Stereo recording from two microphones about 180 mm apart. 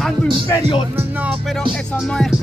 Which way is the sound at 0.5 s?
25° left (ahead or behind).